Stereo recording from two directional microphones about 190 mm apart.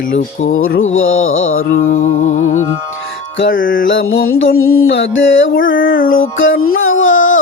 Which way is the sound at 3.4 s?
45° left (ahead or behind).